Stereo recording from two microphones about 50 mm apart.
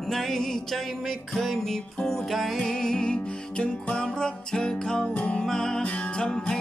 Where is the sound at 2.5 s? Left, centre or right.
Centre.